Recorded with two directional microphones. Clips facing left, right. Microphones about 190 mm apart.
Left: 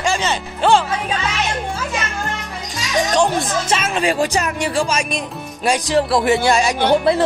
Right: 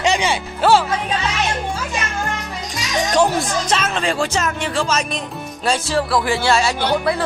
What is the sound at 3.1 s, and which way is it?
Speech, 5° right (ahead or behind).